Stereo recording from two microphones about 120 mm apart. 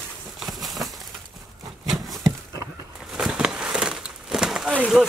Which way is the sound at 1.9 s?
30° right (ahead or behind).